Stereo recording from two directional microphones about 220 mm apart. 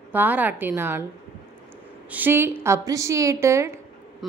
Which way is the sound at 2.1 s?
10° right (ahead or behind).